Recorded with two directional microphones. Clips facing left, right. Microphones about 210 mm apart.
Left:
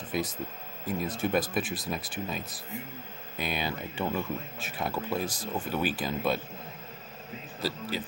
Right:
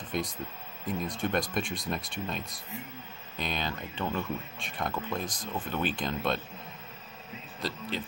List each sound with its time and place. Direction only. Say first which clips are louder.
0.1 s speech: left 2 dB; 5° left (ahead or behind)
7.6 s speech: left 3 dB; 5° left (ahead or behind)